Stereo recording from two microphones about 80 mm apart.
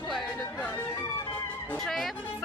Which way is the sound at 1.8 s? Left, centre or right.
Centre.